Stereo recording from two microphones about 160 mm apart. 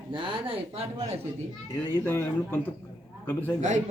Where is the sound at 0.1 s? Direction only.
35° right (ahead or behind).